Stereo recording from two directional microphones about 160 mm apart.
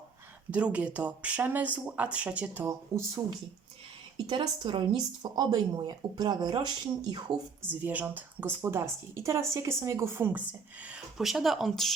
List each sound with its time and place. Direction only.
0.5 s a woman's voice: 10° right (ahead or behind)
4.3 s speech: 30° right (ahead or behind)
7.7 s a woman's voice: 10° right (ahead or behind)